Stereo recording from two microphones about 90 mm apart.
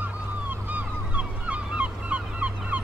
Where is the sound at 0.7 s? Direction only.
15° right (ahead or behind).